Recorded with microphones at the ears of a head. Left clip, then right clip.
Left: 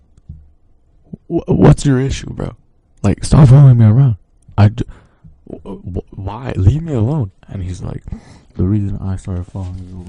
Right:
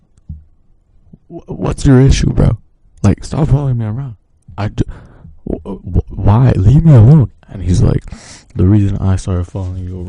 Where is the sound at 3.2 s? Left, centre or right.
Left.